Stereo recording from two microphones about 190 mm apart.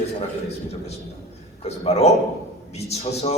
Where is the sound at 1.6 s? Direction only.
35° left (ahead or behind).